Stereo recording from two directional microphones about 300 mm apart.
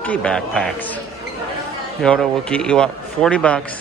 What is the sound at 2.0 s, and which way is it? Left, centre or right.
Speech, centre.